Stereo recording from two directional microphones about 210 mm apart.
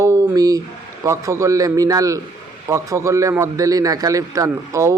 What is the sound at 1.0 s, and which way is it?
A man's voice, 15° right (ahead or behind).